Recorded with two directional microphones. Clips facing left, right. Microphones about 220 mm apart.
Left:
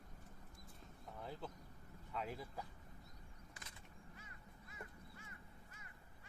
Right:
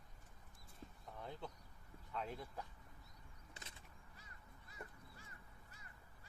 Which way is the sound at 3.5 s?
25° right (ahead or behind).